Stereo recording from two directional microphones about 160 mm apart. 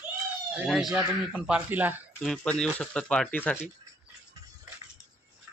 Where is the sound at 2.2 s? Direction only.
5° left (ahead or behind).